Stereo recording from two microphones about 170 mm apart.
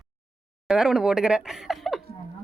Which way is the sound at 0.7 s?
5° right (ahead or behind).